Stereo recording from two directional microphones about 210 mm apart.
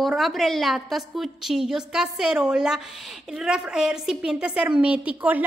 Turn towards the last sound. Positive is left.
turn(degrees=-5)  # may be behind; listen again after turning